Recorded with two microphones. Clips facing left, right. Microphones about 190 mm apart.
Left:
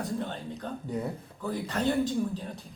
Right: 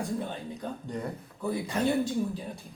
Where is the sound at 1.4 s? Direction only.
10° right (ahead or behind).